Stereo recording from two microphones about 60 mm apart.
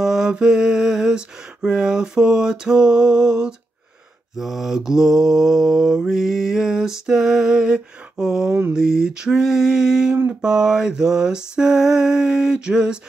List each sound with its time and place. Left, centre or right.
0.0 s mantra: centre
8.5 s mantra: right
8.7 s mantra: centre